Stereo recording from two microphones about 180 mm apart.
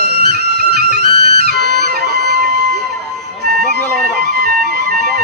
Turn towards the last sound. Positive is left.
turn(degrees=-60)  # may be behind; listen again after turning